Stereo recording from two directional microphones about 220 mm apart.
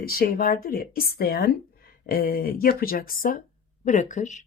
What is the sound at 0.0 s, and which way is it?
Speech, 40° left (ahead or behind).